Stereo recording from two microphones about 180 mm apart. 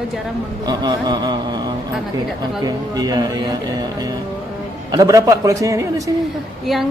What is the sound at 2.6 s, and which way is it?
Speech, 20° right (ahead or behind).